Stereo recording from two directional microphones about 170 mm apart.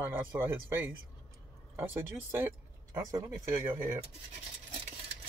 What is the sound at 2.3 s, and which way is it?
Speech, 15° right (ahead or behind).